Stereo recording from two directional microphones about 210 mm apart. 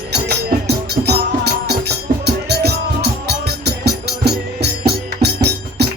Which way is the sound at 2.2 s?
50° right (ahead or behind).